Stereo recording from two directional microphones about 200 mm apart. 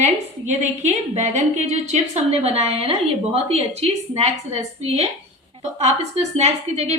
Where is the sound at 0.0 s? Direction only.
35° right (ahead or behind).